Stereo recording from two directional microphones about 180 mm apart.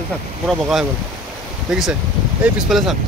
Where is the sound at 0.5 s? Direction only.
Centre (ahead or behind).